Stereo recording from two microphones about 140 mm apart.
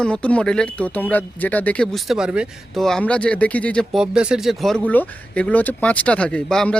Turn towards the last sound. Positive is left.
turn(degrees=5)  # may be behind; listen again after turning